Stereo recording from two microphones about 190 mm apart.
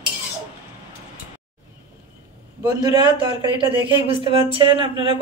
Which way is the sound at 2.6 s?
20° right (ahead or behind).